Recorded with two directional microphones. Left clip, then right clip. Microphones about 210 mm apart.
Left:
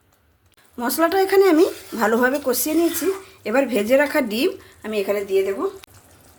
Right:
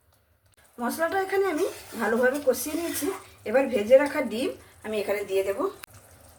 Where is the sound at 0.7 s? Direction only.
50° left (ahead or behind); by 5.4 s 30° left (ahead or behind).